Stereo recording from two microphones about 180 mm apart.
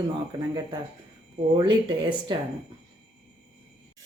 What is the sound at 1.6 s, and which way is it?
Speech, 25° right (ahead or behind).